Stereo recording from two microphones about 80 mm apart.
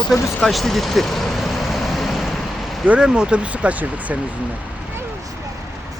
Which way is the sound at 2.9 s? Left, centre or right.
Centre.